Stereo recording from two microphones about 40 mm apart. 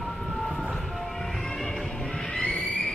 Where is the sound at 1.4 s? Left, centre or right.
Centre.